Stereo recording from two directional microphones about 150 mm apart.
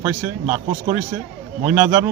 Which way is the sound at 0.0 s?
20° right (ahead or behind).